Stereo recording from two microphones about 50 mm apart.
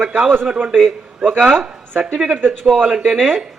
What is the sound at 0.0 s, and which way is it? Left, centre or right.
Speech, right.